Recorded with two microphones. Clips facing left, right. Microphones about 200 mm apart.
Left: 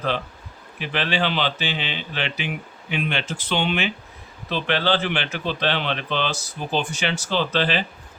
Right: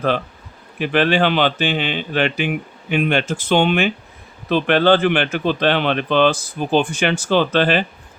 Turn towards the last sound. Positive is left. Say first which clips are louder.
# right 6 dB
turn(degrees=-55)  # may be behind; listen again after turning